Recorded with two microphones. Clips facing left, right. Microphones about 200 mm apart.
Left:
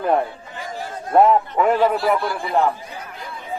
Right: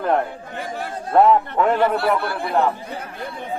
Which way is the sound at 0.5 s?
60° right (ahead or behind).